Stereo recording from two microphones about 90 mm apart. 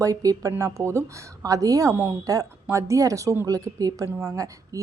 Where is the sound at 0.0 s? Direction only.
40° right (ahead or behind).